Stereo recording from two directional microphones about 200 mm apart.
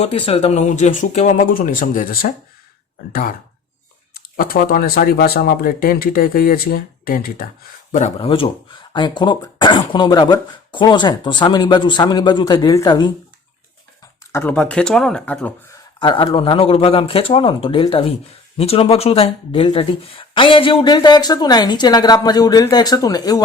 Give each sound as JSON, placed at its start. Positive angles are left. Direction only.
{"t": 0.0, "sound": "speech", "side_deg": 30}
{"t": 7.9, "sound": "speech", "side_deg": 30}
{"t": 14.3, "sound": "speech", "side_deg": 5}
{"t": 16.0, "sound": "speech", "side_deg": 25}